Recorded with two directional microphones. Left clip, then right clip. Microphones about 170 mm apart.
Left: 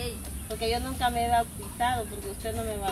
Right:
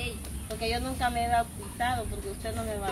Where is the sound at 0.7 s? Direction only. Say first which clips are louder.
Left 2 dB; 15° right (ahead or behind).